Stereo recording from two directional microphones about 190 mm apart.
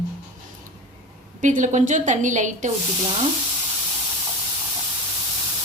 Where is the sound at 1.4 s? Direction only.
40° right (ahead or behind).